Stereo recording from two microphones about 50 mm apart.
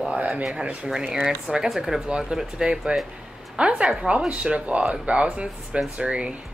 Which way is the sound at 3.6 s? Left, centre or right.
Right.